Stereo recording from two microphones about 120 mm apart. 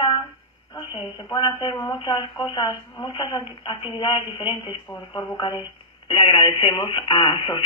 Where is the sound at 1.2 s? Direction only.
40° left (ahead or behind).